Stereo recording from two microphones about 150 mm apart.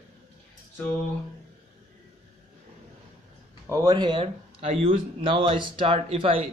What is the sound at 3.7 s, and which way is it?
Speech, 20° right (ahead or behind).